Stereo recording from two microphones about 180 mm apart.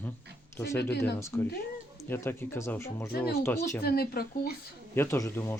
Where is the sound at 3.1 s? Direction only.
60° left (ahead or behind).